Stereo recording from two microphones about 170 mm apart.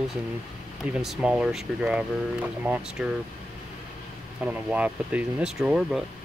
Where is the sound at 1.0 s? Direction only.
5° right (ahead or behind).